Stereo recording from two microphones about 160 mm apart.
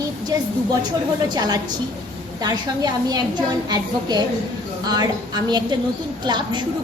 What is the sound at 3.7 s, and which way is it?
A woman's voice, 25° right (ahead or behind).